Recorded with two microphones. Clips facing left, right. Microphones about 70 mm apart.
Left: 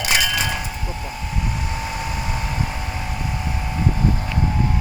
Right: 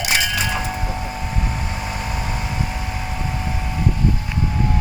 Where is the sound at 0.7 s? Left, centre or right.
Right.